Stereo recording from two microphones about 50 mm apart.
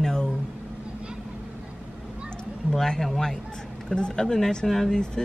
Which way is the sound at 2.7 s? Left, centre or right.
Centre.